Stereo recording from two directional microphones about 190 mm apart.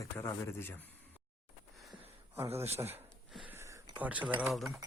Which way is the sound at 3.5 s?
15° right (ahead or behind).